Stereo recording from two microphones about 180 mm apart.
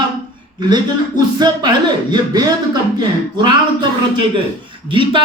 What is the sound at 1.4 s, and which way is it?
A man's voice, 25° right (ahead or behind).